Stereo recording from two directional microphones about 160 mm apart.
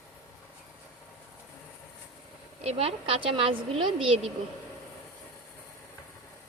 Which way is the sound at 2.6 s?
40° right (ahead or behind).